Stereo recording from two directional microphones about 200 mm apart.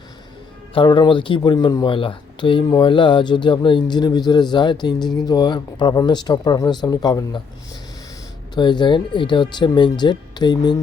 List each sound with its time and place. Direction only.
0.7 s speech: 25° left (ahead or behind)
8.5 s speech: 20° left (ahead or behind)